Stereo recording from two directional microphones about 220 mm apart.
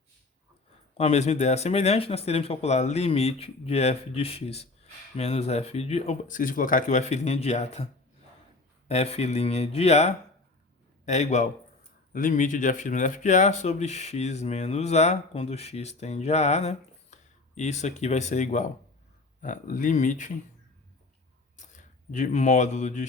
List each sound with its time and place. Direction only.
0.9 s speech: 30° left (ahead or behind)
8.9 s speech: 30° left (ahead or behind)
21.5 s a sound: 35° left (ahead or behind)